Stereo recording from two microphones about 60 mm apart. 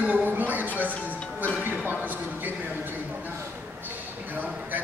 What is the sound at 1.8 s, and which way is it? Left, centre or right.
Speech, right.